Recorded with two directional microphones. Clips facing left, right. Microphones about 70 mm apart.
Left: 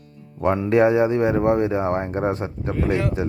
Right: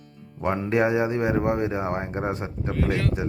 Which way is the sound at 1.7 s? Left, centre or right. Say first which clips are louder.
Left 5 dB; left.